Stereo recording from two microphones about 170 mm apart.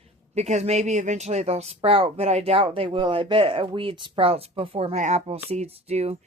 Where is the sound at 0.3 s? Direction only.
40° right (ahead or behind).